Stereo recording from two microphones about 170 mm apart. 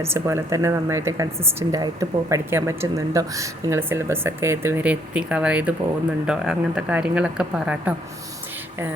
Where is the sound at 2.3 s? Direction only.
15° right (ahead or behind).